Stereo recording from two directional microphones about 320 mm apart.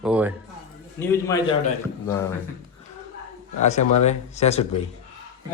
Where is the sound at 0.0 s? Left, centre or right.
Centre.